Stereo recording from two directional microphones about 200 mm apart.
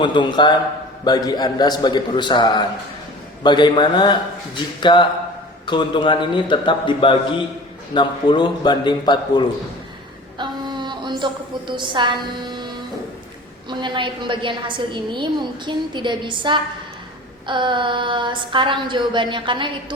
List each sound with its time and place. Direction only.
0.0 s a man's voice: 25° left (ahead or behind)
10.3 s a sound: 20° right (ahead or behind)
13.7 s a woman's voice: 25° right (ahead or behind)